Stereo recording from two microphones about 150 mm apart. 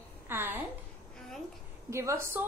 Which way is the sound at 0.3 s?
15° right (ahead or behind).